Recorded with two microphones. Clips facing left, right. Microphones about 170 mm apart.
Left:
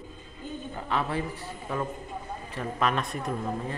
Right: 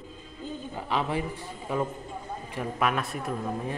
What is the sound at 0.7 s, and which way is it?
Speech, 15° right (ahead or behind).